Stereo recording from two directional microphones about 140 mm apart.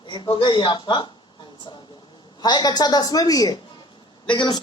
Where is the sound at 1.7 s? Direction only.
35° left (ahead or behind).